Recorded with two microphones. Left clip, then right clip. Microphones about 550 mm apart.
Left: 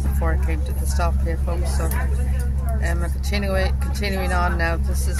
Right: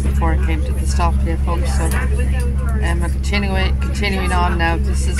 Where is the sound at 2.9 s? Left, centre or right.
Left.